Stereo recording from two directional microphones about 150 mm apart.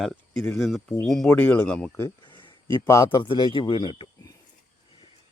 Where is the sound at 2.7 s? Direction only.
20° left (ahead or behind).